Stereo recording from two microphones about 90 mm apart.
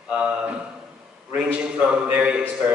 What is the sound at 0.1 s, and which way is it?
A man's voice, 10° right (ahead or behind).